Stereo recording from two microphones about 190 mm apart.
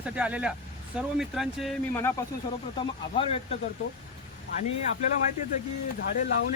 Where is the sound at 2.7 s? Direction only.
30° left (ahead or behind).